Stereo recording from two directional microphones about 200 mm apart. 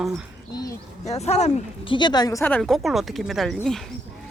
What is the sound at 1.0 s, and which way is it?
Speech, 35° left (ahead or behind).